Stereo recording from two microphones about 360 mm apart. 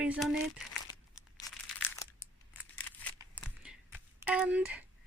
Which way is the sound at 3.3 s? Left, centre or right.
Centre.